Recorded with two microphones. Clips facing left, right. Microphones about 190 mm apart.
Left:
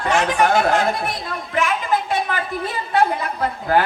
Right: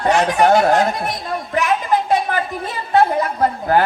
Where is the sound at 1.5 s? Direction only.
40° right (ahead or behind).